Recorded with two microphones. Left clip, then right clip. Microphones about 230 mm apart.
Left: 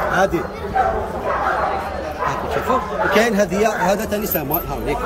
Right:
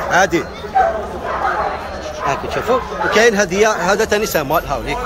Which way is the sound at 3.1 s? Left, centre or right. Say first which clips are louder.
Right 5 dB; centre.